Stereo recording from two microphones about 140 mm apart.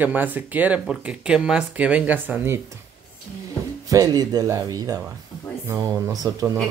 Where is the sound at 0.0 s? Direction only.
15° right (ahead or behind).